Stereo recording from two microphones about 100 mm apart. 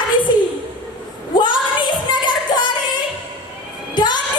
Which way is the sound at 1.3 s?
50° left (ahead or behind).